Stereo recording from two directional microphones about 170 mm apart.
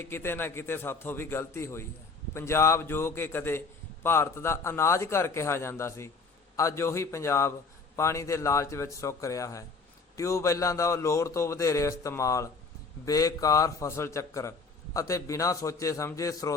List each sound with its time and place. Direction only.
0.0 s a man's voice: 15° left (ahead or behind)